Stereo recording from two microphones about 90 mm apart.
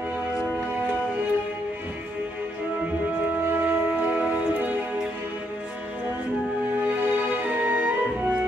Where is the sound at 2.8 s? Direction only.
20° right (ahead or behind).